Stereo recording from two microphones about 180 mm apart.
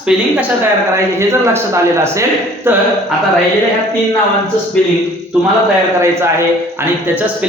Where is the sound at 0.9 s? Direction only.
15° right (ahead or behind).